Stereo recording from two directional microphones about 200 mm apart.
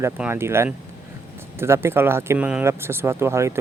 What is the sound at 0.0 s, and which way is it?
Speech, 10° right (ahead or behind).